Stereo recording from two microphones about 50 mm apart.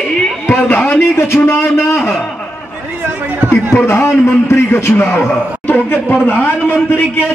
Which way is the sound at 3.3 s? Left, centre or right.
Right.